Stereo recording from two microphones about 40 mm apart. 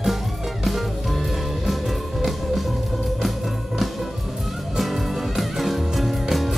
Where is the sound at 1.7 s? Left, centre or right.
Centre.